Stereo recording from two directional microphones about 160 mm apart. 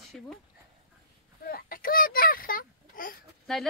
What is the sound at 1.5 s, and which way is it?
A child's voice, 65° left (ahead or behind).